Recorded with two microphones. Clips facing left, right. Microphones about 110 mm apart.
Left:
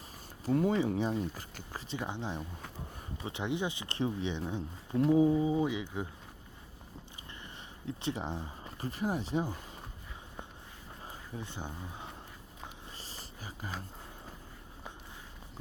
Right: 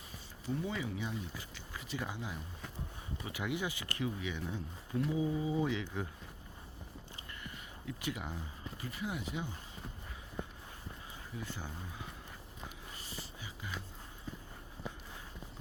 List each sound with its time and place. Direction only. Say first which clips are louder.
0.4 s speech: left 9 dB; 55° left (ahead or behind)
0.7 s speech: left 9 dB; 35° left (ahead or behind)
1.9 s speech: left 4 dB; 25° left (ahead or behind)
4.9 s speech: left 8 dB; 40° left (ahead or behind); by 6.1 s 15° left (ahead or behind)
7.9 s speech: left 5 dB; 30° left (ahead or behind)
11.3 s speech: left 2 dB; 20° left (ahead or behind)
13.0 s a sound: even; 35° left (ahead or behind)